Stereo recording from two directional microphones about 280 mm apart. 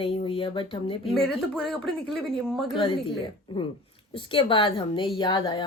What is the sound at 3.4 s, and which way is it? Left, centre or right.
A woman's voice, centre.